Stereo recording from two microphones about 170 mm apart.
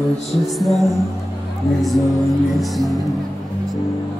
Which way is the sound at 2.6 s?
Centre (ahead or behind).